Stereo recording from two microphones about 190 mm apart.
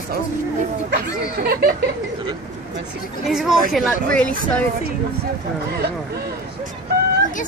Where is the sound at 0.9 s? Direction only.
55° right (ahead or behind).